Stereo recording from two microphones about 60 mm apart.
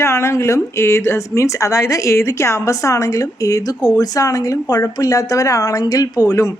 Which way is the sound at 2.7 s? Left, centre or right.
Left.